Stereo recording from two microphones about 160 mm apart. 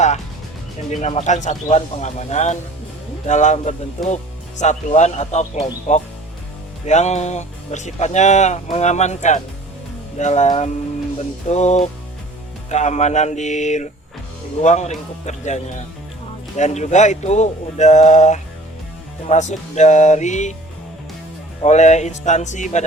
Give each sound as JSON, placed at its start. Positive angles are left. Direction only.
{"t": 0.9, "sound": "speech", "side_deg": 45}
{"t": 21.6, "sound": "speech", "side_deg": 45}